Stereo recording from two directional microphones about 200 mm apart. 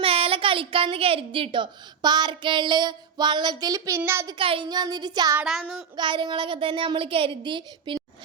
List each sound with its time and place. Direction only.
0.0 s a woman's voice: 30° right (ahead or behind)
4.4 s a woman's voice: 25° right (ahead or behind)
5.4 s child singing: centre (ahead or behind)
6.0 s a woman's voice: 25° right (ahead or behind)